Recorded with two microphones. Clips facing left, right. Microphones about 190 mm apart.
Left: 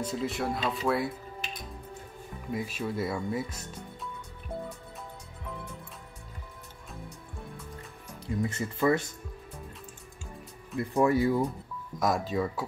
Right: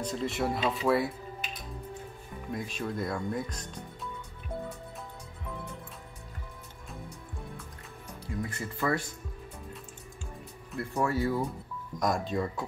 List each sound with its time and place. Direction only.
0.0 s speech: centre (ahead or behind)
2.5 s speech: 5° left (ahead or behind)
8.4 s speech: 25° left (ahead or behind)
10.8 s speech: 15° left (ahead or behind)
12.0 s speech: centre (ahead or behind)